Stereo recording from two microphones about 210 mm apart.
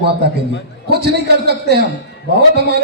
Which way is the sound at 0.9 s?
50° right (ahead or behind).